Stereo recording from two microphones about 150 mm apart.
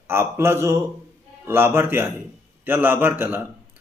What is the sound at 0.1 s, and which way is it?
A man's voice, 15° right (ahead or behind).